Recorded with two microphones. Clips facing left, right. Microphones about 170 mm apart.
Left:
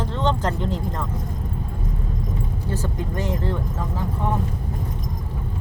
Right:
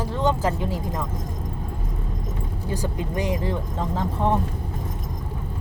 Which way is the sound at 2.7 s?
15° right (ahead or behind).